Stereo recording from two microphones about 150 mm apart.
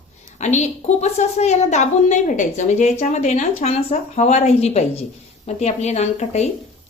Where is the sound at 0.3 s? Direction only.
50° left (ahead or behind).